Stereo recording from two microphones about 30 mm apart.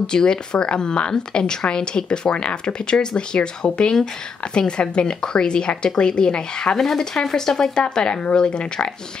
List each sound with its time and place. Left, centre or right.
0.0 s a woman's voice: left
6.8 s speech: centre
8.1 s a woman's voice: left